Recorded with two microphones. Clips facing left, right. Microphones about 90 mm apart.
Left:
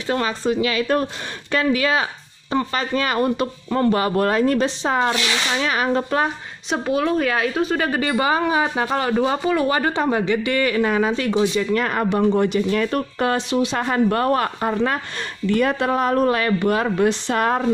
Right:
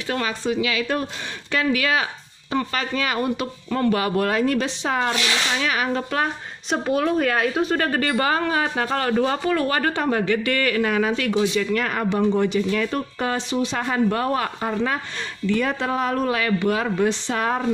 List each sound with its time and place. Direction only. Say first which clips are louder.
0.0 s speech: left 3 dB; 30° left (ahead or behind)
6.7 s a woman's voice: left 1 dB; centre (ahead or behind); by 13.7 s 60° left (ahead or behind)
13.7 s speech: left 1 dB; 45° left (ahead or behind)